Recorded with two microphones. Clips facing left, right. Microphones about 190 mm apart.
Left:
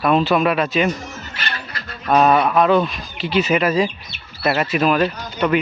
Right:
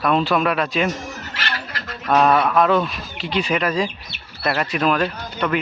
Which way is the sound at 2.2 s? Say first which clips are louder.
Left 1 dB; 5° left (ahead or behind).